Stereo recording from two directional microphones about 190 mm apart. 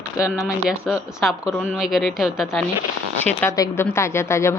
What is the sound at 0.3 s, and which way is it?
Speech, 5° right (ahead or behind).